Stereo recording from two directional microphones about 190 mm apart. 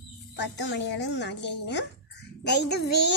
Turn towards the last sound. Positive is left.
turn(degrees=65)  # may be behind; listen again after turning